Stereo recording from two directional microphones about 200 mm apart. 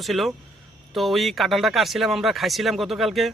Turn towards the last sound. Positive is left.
turn(degrees=0)  # may be behind; listen again after turning